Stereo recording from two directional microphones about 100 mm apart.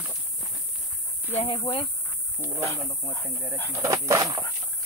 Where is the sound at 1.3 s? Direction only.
90° left.